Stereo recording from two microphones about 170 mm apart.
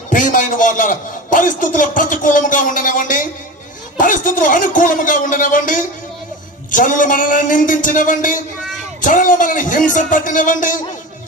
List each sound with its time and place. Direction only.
0.1 s a man's voice: 50° left (ahead or behind)